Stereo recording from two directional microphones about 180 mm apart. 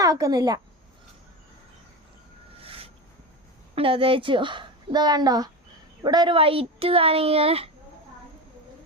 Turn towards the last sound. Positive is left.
turn(degrees=-35)  # may be behind; listen again after turning